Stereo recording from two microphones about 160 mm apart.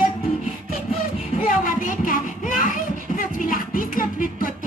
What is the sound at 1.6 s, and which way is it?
Child singing, 55° left (ahead or behind).